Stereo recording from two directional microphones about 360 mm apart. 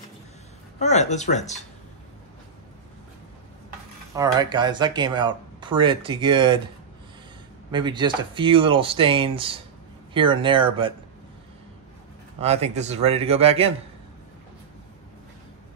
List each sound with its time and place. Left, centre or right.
0.7 s speech: centre
4.1 s speech: centre
7.7 s speech: centre
12.4 s speech: centre